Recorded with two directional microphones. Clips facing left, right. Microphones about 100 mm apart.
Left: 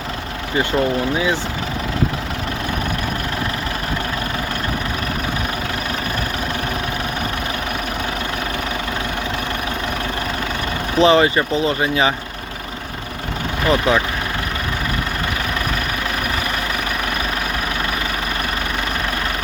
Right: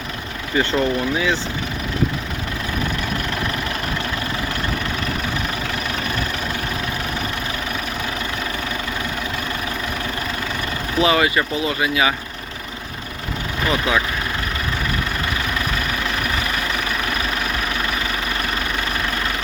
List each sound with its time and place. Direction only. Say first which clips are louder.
0.5 s speech: left 1 dB; 15° left (ahead or behind)
11.0 s speech: left 4 dB; 30° left (ahead or behind)
13.7 s speech: left 4 dB; 35° left (ahead or behind)